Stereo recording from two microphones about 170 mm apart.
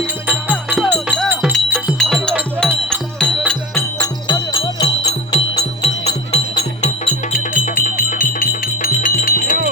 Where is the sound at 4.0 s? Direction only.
25° left (ahead or behind); by 9.6 s 55° left (ahead or behind).